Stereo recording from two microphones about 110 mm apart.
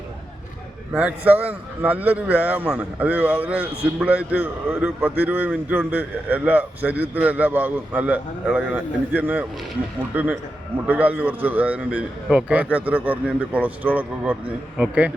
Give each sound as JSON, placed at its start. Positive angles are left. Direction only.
{"t": 0.9, "sound": "a man's voice", "side_deg": -15}